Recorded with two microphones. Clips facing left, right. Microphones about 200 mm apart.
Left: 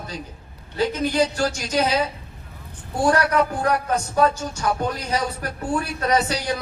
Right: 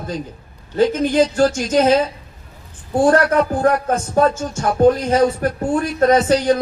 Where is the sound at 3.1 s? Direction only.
45° right (ahead or behind).